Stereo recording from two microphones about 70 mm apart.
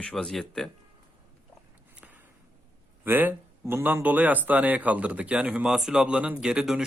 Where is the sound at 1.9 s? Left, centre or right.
Right.